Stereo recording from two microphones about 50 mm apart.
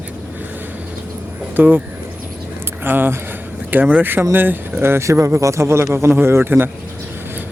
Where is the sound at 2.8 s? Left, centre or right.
Right.